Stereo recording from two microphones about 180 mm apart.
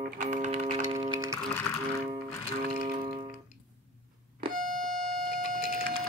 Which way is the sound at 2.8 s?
30° right (ahead or behind).